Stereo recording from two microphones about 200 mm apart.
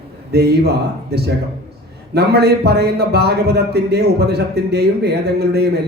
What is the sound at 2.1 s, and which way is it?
A man's voice, 55° right (ahead or behind).